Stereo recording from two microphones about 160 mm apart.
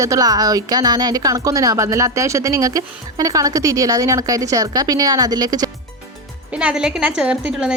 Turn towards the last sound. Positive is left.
turn(degrees=-5)  # may be behind; listen again after turning